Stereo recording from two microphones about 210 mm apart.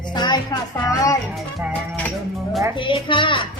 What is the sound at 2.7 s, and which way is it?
Speech, 25° left (ahead or behind).